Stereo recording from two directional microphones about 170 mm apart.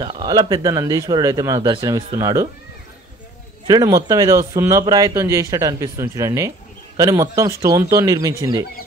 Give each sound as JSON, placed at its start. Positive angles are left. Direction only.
{"t": 0.0, "sound": "speech", "side_deg": -25}
{"t": 3.6, "sound": "speech", "side_deg": -20}